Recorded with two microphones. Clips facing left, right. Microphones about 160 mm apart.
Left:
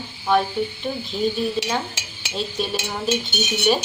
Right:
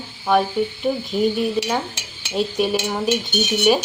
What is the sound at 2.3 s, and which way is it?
Speech, 10° right (ahead or behind).